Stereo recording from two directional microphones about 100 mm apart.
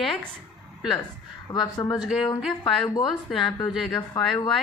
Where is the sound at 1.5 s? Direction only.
45° left (ahead or behind).